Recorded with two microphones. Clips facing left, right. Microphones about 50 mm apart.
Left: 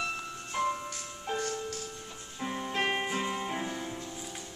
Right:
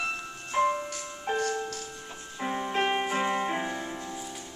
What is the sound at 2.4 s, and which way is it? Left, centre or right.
Music, right.